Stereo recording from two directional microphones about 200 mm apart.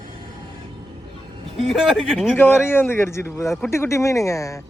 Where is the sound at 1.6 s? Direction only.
Centre (ahead or behind).